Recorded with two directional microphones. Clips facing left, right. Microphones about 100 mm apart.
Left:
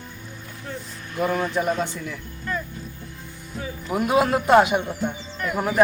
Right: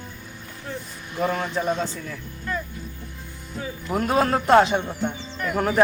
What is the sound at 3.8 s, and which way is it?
Speech, 10° left (ahead or behind).